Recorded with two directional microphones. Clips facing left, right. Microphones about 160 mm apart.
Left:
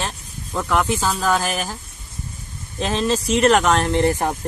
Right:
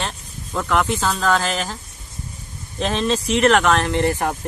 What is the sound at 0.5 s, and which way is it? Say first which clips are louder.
Speech: even; 5° left (ahead or behind).